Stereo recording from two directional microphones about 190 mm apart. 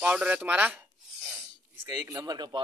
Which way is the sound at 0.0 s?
5° right (ahead or behind).